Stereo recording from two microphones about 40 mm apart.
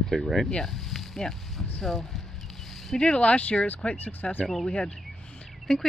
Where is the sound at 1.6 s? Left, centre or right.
Centre.